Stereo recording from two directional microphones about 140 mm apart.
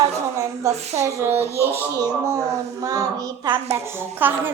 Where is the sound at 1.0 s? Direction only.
20° right (ahead or behind).